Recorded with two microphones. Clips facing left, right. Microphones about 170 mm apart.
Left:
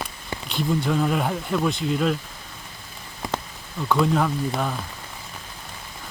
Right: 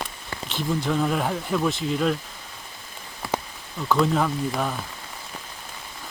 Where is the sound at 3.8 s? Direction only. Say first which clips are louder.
Even; centre (ahead or behind).